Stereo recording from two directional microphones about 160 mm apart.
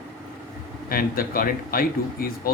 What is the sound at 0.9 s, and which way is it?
Speech, 65° left (ahead or behind).